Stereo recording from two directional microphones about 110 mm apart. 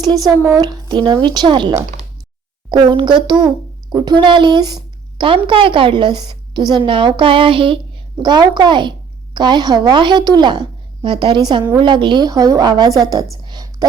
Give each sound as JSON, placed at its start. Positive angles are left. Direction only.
{"t": 0.0, "sound": "a woman's voice", "side_deg": -40}
{"t": 5.2, "sound": "a woman's voice", "side_deg": -55}
{"t": 8.2, "sound": "a woman's voice", "side_deg": -40}
{"t": 13.5, "sound": "a sound", "side_deg": -35}